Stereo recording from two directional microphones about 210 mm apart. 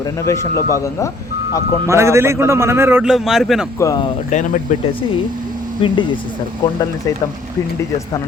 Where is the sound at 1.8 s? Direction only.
15° right (ahead or behind).